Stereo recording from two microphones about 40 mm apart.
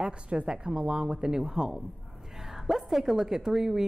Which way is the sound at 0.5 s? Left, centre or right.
Centre.